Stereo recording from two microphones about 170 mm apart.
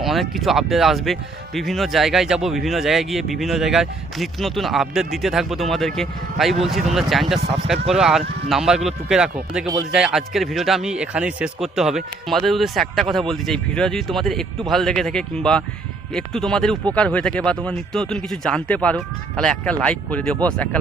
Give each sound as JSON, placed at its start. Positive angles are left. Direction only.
{"t": 0.0, "sound": "speech", "side_deg": 0}
{"t": 7.3, "sound": "speech", "side_deg": -35}
{"t": 7.7, "sound": "speech", "side_deg": 0}